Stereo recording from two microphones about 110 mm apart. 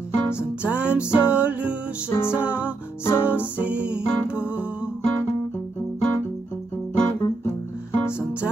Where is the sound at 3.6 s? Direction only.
10° right (ahead or behind).